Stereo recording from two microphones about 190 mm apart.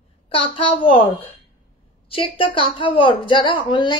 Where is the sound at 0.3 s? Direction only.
30° left (ahead or behind).